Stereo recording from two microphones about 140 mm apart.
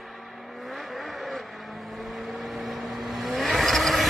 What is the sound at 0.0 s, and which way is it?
Vehicle, centre (ahead or behind).